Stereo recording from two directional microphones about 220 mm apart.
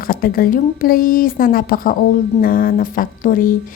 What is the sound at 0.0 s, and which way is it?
A woman's voice, 40° left (ahead or behind).